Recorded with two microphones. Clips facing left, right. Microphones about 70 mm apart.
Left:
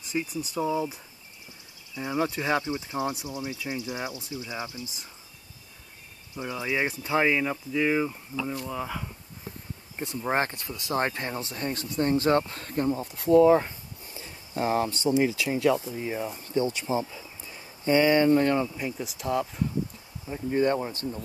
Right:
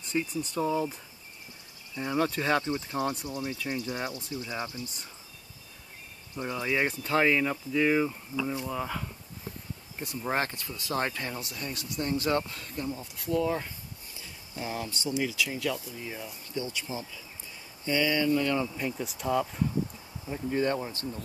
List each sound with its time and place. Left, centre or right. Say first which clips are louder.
0.0 s speech: even; centre
2.0 s speech: even; centre
6.3 s speech: even; centre
10.0 s speech: left 3 dB; left
17.1 s a sound: left 3 dB; left
18.8 s speech: even; centre
20.5 s speech: left 4 dB; left